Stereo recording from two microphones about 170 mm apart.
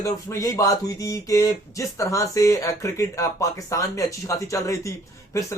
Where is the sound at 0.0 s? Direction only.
20° left (ahead or behind).